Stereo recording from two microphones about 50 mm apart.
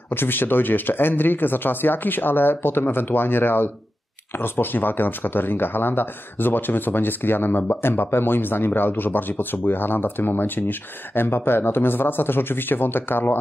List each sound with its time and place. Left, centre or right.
0.1 s speech: left